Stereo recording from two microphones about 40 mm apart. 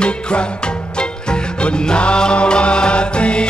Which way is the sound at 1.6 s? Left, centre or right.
Left.